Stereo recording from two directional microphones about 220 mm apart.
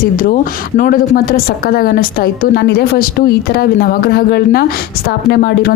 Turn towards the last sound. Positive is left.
turn(degrees=45)  # may be behind; listen again after turning